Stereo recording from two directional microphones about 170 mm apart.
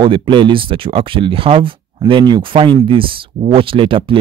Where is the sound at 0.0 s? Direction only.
30° right (ahead or behind).